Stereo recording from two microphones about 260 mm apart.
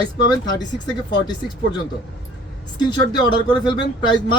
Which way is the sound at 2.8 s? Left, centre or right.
Centre.